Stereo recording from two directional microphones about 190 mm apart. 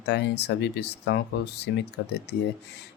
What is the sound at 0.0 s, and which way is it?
Speech, 60° left (ahead or behind).